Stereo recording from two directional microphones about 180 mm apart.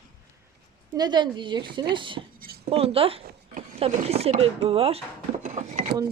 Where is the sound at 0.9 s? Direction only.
25° right (ahead or behind); by 5.9 s 40° right (ahead or behind).